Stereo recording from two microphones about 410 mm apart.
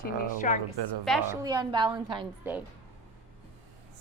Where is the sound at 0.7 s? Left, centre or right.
Right.